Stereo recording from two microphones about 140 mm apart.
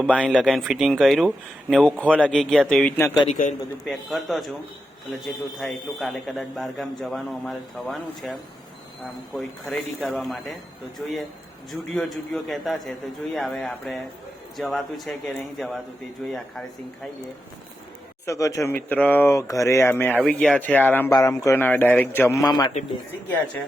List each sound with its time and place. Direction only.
0.2 s a man's voice: 5° right (ahead or behind)
3.2 s a man's voice: 65° left (ahead or behind)
3.8 s a man's voice: centre (ahead or behind)
11.7 s a man's voice: centre (ahead or behind)
18.3 s speech: 25° left (ahead or behind)
21.1 s speech: 25° left (ahead or behind)
22.4 s a man's voice: 30° left (ahead or behind)